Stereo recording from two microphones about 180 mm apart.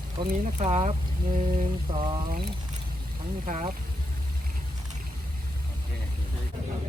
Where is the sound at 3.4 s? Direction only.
45° right (ahead or behind).